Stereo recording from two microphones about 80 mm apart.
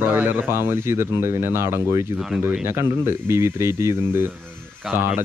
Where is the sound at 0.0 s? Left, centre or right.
Right.